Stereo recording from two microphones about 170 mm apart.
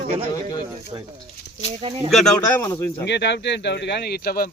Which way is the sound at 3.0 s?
90° left.